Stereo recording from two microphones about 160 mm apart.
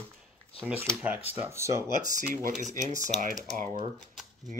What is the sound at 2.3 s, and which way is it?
Speech, 55° right (ahead or behind).